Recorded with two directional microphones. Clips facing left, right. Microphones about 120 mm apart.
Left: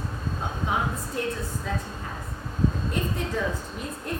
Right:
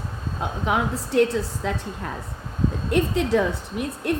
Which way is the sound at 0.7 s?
90° right.